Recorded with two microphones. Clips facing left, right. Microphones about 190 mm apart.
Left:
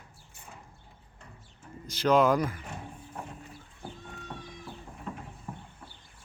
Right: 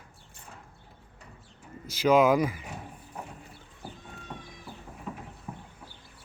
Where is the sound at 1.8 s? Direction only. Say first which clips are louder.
Right 2 dB; 10° right (ahead or behind).